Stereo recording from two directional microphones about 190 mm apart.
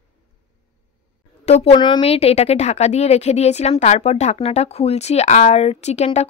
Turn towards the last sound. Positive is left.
turn(degrees=35)  # may be behind; listen again after turning